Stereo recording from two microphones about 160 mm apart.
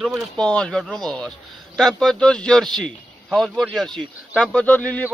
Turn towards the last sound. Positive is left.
turn(degrees=10)  # may be behind; listen again after turning